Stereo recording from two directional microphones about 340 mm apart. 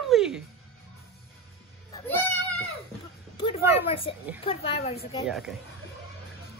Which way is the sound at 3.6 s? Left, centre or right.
Centre.